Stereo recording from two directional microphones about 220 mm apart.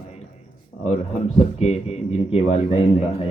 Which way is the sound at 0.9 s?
30° left (ahead or behind).